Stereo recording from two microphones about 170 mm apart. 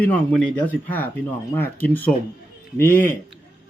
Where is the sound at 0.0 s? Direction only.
10° left (ahead or behind).